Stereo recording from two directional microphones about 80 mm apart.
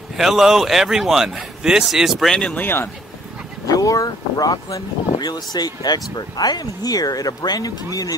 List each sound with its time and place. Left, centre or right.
0.2 s speech: centre
2.3 s speech: centre
2.6 s speech: left
3.6 s speech: left